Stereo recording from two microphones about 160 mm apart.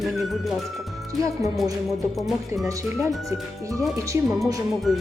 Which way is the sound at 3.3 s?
20° right (ahead or behind).